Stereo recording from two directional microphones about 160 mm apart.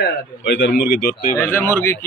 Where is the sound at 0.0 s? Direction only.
90° left.